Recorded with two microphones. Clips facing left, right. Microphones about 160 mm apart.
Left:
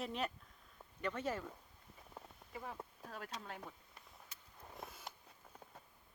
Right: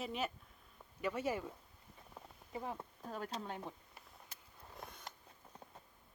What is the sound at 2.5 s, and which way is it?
Speech, 30° right (ahead or behind).